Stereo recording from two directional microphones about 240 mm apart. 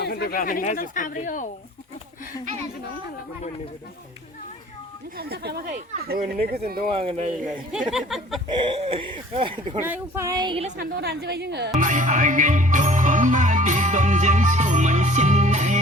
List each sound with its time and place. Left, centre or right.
0.0 s speech: left
5.1 s speech: right
7.0 s speech: right
7.4 s speech: centre
8.5 s speech: right
9.8 s speech: centre
10.8 s a woman's voice: right
11.8 s music: right